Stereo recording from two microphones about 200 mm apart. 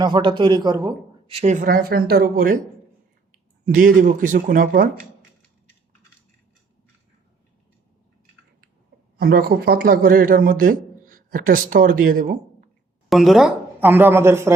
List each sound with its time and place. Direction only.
0.0 s a man's voice: 25° right (ahead or behind)
1.3 s speech: 35° right (ahead or behind)
3.7 s speech: 40° right (ahead or behind)
9.1 s a man's voice: 50° right (ahead or behind)
13.1 s a woman's voice: centre (ahead or behind)